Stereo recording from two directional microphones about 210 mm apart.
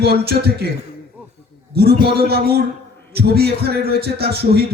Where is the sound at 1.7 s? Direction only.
50° right (ahead or behind).